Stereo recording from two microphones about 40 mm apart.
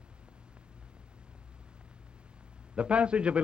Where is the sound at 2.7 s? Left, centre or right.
Right.